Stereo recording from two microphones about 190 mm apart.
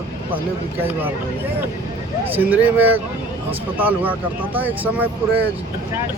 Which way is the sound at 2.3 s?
10° right (ahead or behind).